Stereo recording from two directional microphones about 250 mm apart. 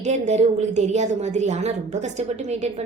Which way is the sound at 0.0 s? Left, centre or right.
Right.